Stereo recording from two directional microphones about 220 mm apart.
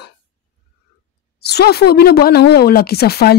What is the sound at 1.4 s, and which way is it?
A woman's voice, 45° left (ahead or behind).